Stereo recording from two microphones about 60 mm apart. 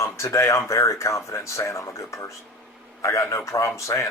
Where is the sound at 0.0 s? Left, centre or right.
Left.